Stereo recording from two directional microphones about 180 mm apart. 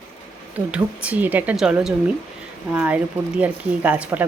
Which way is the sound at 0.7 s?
10° right (ahead or behind).